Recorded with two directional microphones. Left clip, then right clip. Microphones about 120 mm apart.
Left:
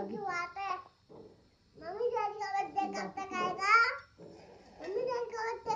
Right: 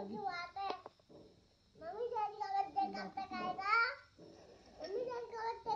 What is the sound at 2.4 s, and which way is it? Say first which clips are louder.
Child singing: left 3 dB; centre (ahead or behind).